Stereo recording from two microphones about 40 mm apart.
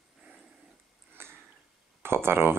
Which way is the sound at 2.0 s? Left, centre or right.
Right.